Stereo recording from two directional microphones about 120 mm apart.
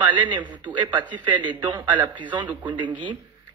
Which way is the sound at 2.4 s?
15° right (ahead or behind).